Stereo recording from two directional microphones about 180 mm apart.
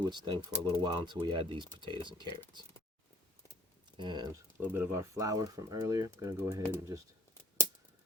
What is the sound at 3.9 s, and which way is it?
Speech, 25° right (ahead or behind).